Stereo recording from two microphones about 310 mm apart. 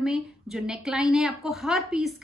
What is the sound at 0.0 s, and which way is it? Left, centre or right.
Speech, centre.